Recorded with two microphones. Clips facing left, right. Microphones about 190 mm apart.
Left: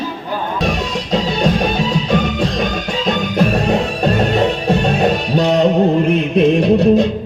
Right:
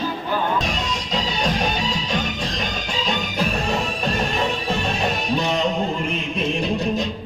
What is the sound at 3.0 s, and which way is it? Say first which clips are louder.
Music: left 9 dB; 60° left (ahead or behind).